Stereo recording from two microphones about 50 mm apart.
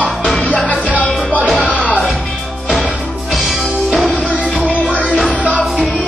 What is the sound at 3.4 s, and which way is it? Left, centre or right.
Music, centre.